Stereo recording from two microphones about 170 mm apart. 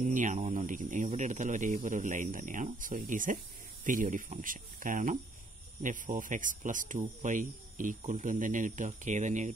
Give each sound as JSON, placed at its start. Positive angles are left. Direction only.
{"t": 0.0, "sound": "speech", "side_deg": -50}